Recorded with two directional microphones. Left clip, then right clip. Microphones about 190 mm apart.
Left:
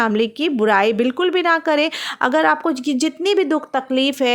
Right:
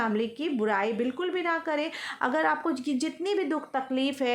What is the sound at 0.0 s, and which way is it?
A woman's voice, 45° left (ahead or behind).